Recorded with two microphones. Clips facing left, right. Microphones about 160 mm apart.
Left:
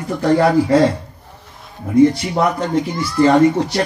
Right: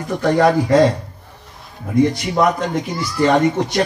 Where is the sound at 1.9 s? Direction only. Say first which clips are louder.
Left 4 dB; 30° left (ahead or behind).